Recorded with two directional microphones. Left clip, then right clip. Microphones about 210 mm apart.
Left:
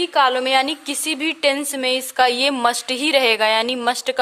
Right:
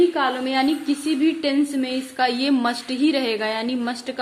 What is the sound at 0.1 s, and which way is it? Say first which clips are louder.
A woman's voice: left 6 dB; 55° left (ahead or behind).